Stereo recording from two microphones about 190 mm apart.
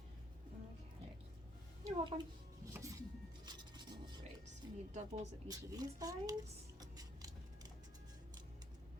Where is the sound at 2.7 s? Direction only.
15° right (ahead or behind).